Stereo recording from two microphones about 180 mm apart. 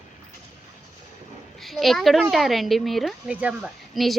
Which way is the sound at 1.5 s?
Centre (ahead or behind).